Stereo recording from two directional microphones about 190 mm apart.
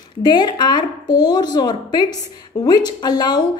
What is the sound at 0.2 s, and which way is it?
A woman's voice, 25° left (ahead or behind).